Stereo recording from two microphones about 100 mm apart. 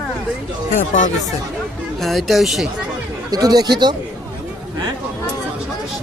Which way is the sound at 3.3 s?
40° right (ahead or behind).